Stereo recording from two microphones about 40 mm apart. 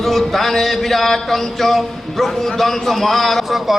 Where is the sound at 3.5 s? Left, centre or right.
Centre.